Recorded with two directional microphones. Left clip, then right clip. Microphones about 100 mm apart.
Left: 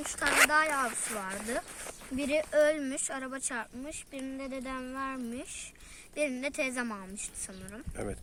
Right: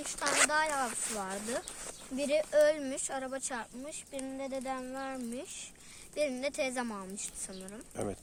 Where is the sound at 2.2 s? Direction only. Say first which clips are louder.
Even; 50° right (ahead or behind).